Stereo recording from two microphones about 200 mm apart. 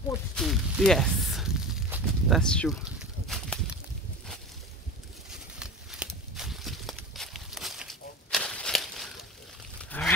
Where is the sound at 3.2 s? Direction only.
Centre (ahead or behind).